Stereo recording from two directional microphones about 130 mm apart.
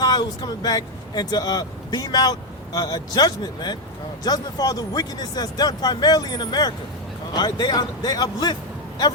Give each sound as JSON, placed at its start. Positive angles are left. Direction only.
{"t": 0.0, "sound": "speech", "side_deg": 30}